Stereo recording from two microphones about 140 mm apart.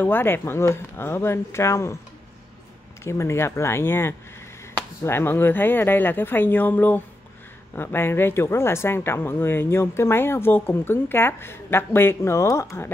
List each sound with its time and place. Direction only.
0.0 s speech: 15° left (ahead or behind)
3.0 s speech: 20° left (ahead or behind)